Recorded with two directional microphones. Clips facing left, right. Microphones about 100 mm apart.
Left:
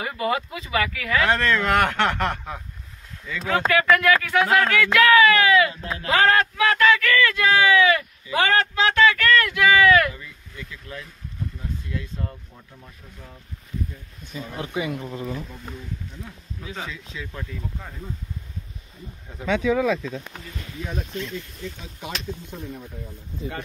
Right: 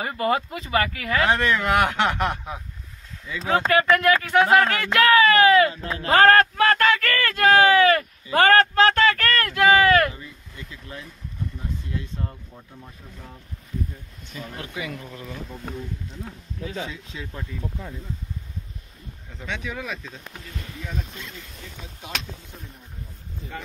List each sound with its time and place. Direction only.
0.0 s speech: 40° right (ahead or behind)
1.3 s speech: 15° right (ahead or behind)
3.4 s speech: 35° right (ahead or behind)
14.2 s speech: 15° left (ahead or behind)
16.9 s speech: 30° right (ahead or behind)